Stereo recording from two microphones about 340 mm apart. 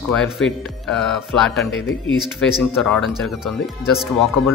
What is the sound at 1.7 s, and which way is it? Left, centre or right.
Speech, left.